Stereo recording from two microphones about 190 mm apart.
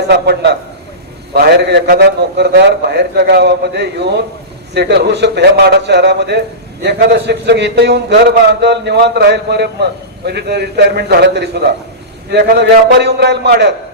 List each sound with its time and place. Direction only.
0.1 s a man's voice: 60° right (ahead or behind)